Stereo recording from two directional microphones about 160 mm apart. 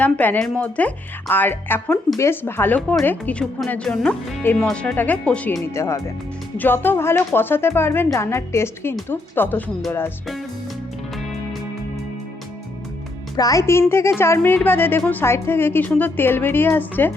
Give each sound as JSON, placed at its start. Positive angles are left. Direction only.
{"t": 0.0, "sound": "speech", "side_deg": 10}
{"t": 13.3, "sound": "speech", "side_deg": 20}